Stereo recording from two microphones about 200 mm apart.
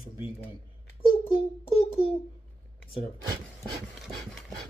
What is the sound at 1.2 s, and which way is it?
Child singing, 30° left (ahead or behind).